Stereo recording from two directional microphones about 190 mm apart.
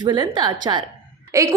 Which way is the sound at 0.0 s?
20° right (ahead or behind).